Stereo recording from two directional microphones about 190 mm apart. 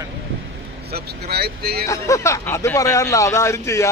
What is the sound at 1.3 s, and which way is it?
Speech, 55° right (ahead or behind).